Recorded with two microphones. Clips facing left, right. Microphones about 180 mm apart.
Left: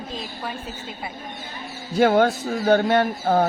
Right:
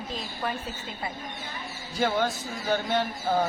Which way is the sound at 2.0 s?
60° left (ahead or behind).